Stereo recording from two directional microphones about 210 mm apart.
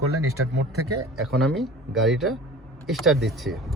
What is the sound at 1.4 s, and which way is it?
Speech, centre (ahead or behind).